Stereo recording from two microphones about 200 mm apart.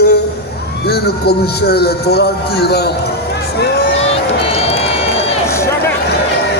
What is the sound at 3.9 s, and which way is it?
Run, 30° left (ahead or behind).